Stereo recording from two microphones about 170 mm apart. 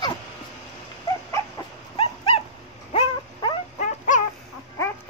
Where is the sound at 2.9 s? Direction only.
30° left (ahead or behind).